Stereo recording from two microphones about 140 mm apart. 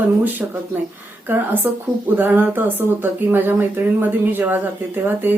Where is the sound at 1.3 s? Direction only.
15° right (ahead or behind).